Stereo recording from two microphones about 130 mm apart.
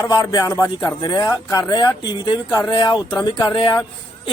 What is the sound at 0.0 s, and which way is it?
Speech, 25° left (ahead or behind).